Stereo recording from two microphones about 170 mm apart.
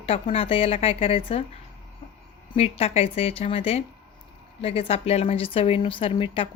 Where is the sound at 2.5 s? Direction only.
35° left (ahead or behind).